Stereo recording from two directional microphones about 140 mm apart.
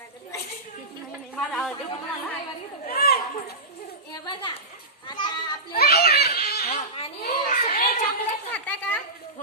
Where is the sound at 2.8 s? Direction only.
90° left.